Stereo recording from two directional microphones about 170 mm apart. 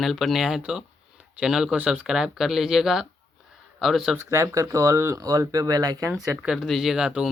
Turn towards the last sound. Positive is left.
turn(degrees=-5)  # may be behind; listen again after turning